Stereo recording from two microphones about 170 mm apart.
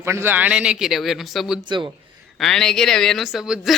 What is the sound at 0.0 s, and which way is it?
Speech, 15° right (ahead or behind).